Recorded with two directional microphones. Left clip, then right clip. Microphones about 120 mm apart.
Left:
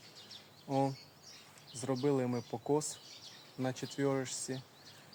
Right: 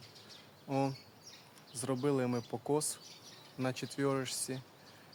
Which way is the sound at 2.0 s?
20° right (ahead or behind).